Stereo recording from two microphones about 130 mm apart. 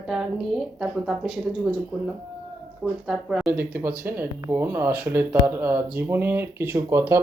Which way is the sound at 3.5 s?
15° right (ahead or behind).